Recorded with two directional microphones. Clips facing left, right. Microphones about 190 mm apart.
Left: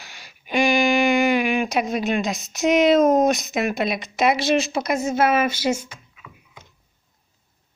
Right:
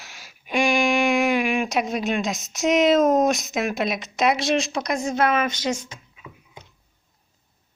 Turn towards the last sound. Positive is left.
turn(degrees=10)  # may be behind; listen again after turning